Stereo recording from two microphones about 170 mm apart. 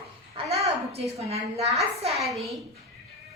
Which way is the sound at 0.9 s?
35° right (ahead or behind).